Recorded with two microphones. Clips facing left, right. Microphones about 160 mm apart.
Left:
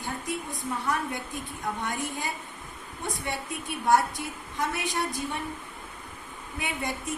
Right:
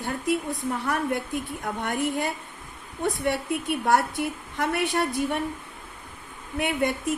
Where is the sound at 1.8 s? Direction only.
60° right (ahead or behind).